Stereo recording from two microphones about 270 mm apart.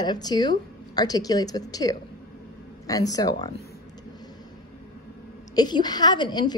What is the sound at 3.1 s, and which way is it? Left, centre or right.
Speech, centre.